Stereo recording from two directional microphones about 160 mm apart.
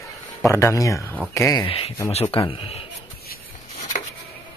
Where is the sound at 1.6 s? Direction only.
35° left (ahead or behind).